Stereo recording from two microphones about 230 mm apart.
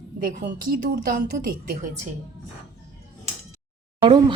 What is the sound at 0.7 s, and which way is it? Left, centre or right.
Speech, right.